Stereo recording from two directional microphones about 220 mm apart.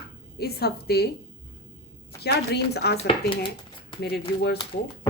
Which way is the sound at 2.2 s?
50° left (ahead or behind).